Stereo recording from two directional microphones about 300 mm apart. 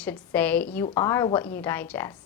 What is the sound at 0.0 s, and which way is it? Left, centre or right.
A woman's voice, centre.